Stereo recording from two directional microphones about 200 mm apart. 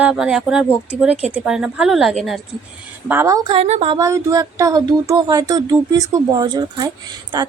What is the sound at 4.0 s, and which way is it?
Speech, 15° right (ahead or behind).